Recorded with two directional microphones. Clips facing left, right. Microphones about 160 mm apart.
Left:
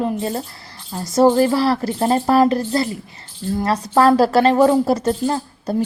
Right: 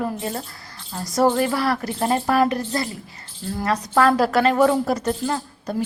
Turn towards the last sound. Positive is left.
turn(degrees=30)  # may be behind; listen again after turning